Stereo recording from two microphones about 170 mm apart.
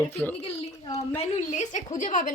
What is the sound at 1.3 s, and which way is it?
A woman's voice, 45° left (ahead or behind).